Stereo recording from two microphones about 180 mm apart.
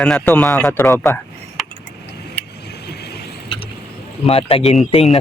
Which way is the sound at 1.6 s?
Centre (ahead or behind).